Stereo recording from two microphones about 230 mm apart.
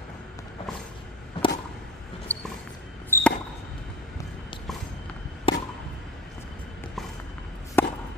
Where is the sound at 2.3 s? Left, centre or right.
Centre.